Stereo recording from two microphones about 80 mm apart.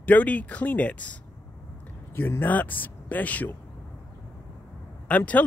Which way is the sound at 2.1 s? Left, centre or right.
Left.